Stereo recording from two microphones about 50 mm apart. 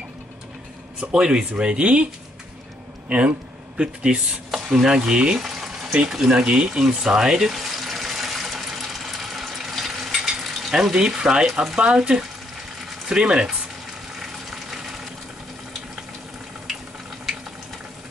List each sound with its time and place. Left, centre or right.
1.1 s speech: centre
3.1 s speech: right
4.6 s stir: centre
5.4 s a sound: centre
6.0 s stir: centre
6.4 s speech: right
7.0 s water: centre
11.5 s speech: centre
12.0 s stir: centre
14.2 s a sound: centre